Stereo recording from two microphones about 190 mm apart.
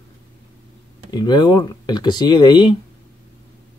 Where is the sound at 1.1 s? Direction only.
20° left (ahead or behind).